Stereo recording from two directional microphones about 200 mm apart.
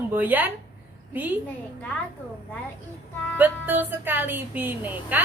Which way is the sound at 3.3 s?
10° right (ahead or behind).